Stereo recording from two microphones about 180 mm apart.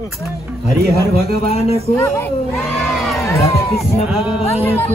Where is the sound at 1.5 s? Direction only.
35° left (ahead or behind).